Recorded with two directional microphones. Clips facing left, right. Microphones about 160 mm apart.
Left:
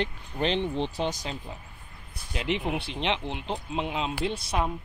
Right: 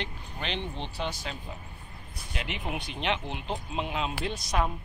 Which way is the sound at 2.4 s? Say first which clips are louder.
Left 6 dB; 30° left (ahead or behind).